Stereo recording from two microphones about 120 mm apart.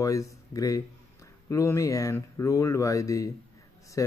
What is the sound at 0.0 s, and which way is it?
Speech, 25° left (ahead or behind).